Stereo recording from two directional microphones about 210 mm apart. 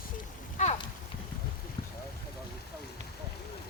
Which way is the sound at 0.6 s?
30° left (ahead or behind).